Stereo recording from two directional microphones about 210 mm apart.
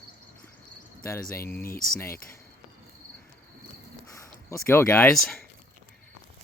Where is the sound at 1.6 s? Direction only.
45° left (ahead or behind).